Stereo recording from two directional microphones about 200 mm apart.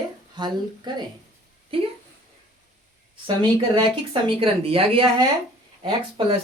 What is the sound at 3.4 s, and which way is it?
Speech, 25° right (ahead or behind).